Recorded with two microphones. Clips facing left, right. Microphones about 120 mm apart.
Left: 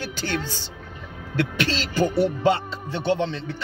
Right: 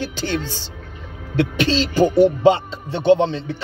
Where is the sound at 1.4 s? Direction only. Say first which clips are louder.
Right 6 dB; 20° right (ahead or behind).